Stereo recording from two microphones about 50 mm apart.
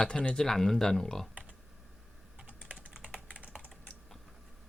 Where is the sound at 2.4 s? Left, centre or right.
Right.